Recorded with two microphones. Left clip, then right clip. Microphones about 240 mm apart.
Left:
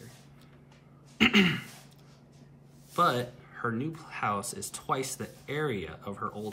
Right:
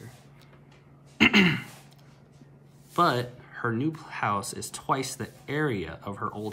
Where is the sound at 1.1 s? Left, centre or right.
Centre.